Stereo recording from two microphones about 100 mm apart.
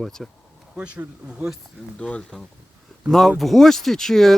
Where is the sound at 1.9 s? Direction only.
10° left (ahead or behind).